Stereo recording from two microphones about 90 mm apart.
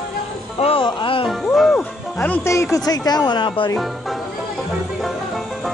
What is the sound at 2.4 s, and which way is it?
Speech, 30° left (ahead or behind).